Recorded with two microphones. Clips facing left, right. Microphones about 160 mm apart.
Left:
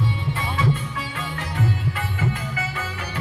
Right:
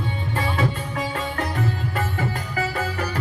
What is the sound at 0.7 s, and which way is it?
Music, 40° right (ahead or behind).